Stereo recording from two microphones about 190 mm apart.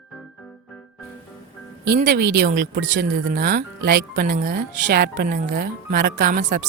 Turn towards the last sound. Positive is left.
turn(degrees=-45)  # may be behind; listen again after turning